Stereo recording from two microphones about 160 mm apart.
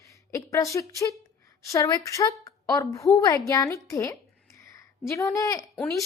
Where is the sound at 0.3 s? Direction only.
20° left (ahead or behind).